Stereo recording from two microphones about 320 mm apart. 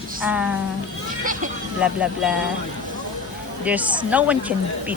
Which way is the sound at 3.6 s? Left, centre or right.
Centre.